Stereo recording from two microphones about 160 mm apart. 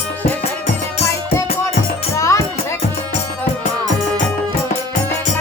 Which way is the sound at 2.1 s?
20° left (ahead or behind).